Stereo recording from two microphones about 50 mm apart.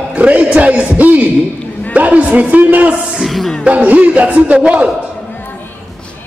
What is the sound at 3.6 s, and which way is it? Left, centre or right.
A man's voice, right.